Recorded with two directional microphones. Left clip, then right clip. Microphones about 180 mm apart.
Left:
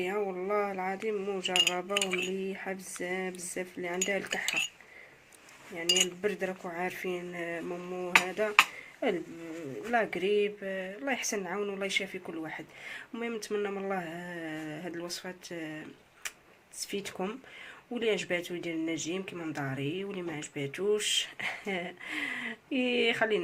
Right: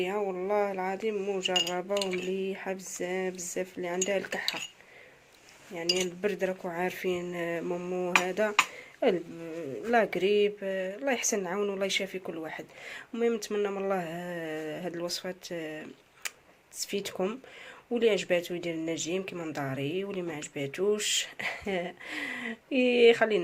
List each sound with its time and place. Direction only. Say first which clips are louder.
0.0 s speech: right 2 dB; 30° right (ahead or behind)
6.0 s speech: even; 35° right (ahead or behind)